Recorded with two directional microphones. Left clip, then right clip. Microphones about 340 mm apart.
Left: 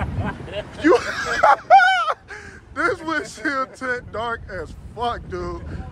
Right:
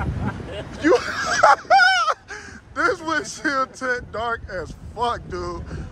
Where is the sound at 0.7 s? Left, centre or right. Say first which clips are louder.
Left 1 dB; centre.